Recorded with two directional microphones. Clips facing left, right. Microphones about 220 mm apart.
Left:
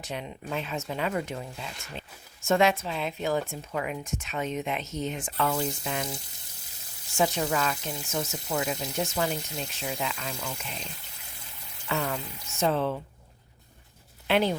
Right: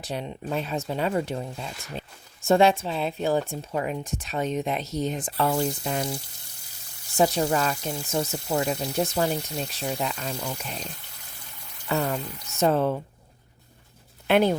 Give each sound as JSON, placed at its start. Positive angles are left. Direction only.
{"t": 0.0, "sound": "speech", "side_deg": -35}
{"t": 7.2, "sound": "speech", "side_deg": -35}
{"t": 12.1, "sound": "speech", "side_deg": -40}
{"t": 14.3, "sound": "speech", "side_deg": -50}